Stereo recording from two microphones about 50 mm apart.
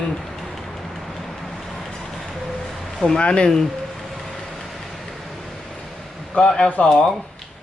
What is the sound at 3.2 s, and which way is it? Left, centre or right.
Speech, centre.